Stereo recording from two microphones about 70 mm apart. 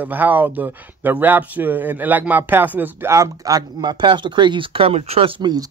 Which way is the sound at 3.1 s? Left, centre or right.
Right.